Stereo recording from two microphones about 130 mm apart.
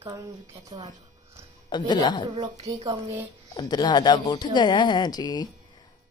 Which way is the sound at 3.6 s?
35° left (ahead or behind).